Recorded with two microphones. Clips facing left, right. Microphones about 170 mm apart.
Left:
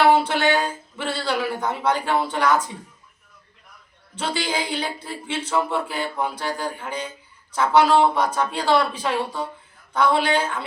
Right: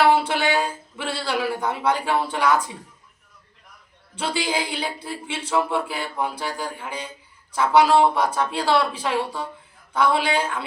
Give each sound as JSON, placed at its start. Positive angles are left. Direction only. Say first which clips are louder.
{"t": 0.3, "sound": "speech", "louder": "left 1 dB", "side_deg": -5}
{"t": 4.1, "sound": "speech", "louder": "right 1 dB", "side_deg": -10}